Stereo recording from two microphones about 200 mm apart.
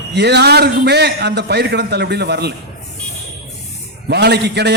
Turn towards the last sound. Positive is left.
turn(degrees=-55)  # may be behind; listen again after turning